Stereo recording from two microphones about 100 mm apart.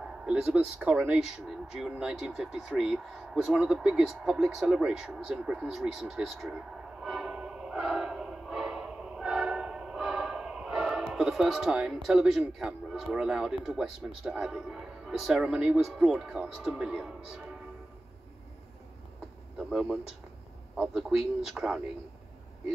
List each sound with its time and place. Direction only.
0.2 s speech: 10° right (ahead or behind)
1.2 s speech: 5° right (ahead or behind)
19.7 s speech: 10° right (ahead or behind)